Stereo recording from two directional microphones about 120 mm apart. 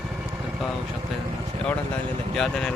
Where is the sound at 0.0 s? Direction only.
10° right (ahead or behind).